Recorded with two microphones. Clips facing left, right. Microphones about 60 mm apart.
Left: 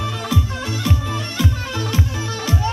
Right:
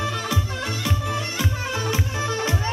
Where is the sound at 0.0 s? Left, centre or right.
Centre.